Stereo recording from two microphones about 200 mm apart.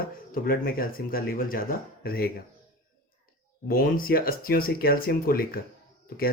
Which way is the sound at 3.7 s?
45° left (ahead or behind).